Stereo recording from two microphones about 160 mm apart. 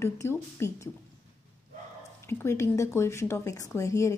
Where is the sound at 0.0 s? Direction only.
15° left (ahead or behind).